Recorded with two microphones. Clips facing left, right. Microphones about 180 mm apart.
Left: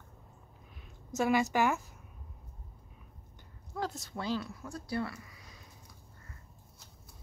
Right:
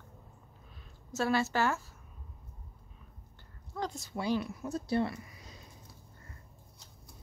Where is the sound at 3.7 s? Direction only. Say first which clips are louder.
Even; 5° left (ahead or behind).